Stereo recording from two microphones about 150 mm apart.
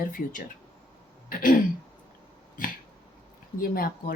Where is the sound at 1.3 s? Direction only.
65° left (ahead or behind).